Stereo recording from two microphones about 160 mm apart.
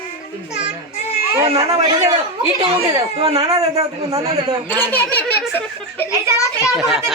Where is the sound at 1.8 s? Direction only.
25° right (ahead or behind).